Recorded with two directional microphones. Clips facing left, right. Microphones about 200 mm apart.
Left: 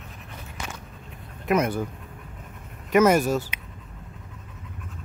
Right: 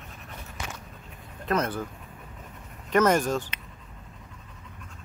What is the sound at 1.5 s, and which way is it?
Speech, 10° left (ahead or behind).